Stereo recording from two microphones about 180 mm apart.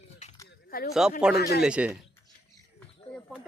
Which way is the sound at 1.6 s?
5° right (ahead or behind).